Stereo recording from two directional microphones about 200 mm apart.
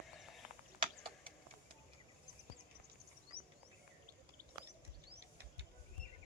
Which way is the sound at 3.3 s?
50° right (ahead or behind).